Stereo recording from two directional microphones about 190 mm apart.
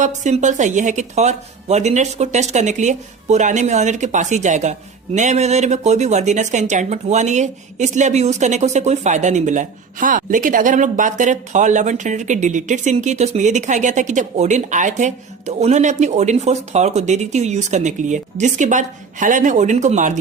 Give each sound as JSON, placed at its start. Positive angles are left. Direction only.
{"t": 0.0, "sound": "speech", "side_deg": -40}